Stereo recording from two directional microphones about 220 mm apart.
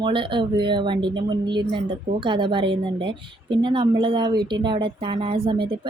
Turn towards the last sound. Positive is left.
turn(degrees=-20)  # may be behind; listen again after turning